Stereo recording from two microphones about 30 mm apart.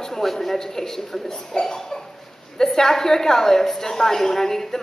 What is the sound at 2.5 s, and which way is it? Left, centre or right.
A woman's voice, centre.